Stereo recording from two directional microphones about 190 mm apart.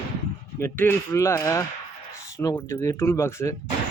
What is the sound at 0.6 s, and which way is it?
Speech, 10° left (ahead or behind).